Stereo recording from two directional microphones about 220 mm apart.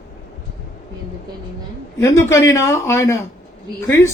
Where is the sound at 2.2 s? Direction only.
15° left (ahead or behind).